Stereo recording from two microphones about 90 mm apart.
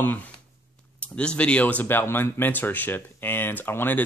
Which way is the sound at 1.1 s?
10° left (ahead or behind).